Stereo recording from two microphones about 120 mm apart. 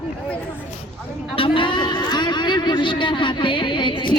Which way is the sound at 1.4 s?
45° left (ahead or behind).